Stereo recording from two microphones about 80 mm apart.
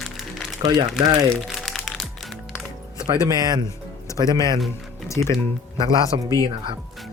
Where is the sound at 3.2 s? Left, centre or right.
Right.